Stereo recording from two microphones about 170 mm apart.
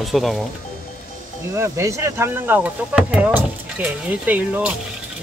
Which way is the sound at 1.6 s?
15° right (ahead or behind).